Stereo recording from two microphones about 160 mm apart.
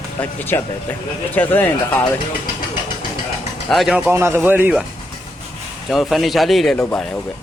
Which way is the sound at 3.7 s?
5° right (ahead or behind).